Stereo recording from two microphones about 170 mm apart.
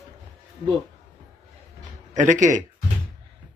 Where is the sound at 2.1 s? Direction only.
45° right (ahead or behind).